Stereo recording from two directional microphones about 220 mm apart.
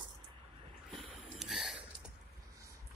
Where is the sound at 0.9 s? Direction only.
Centre (ahead or behind).